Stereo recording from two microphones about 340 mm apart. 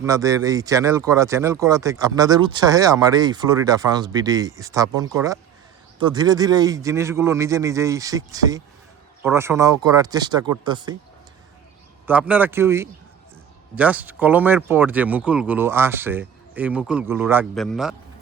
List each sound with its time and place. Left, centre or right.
0.0 s speech: centre
12.0 s speech: centre